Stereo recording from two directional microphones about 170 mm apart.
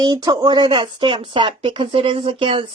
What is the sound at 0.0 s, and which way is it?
Speech, 25° right (ahead or behind).